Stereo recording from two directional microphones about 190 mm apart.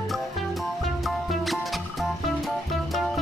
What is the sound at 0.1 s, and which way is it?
Music, centre (ahead or behind).